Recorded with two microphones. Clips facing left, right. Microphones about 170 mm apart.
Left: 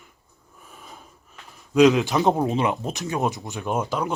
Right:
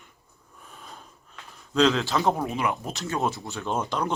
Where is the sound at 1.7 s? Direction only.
15° left (ahead or behind).